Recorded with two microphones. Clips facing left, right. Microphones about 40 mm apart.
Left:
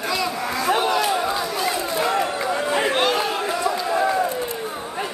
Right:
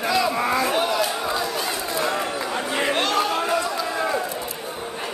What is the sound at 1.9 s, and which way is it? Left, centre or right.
Run, centre.